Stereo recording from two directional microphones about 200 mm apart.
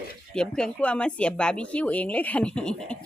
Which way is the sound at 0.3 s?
5° left (ahead or behind).